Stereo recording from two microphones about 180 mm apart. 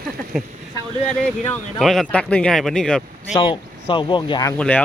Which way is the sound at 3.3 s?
30° left (ahead or behind).